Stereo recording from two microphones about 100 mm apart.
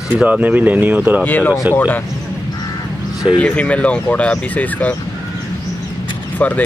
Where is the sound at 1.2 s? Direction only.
20° left (ahead or behind).